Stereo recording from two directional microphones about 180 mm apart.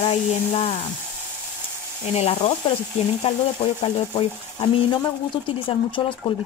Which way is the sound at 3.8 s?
30° left (ahead or behind).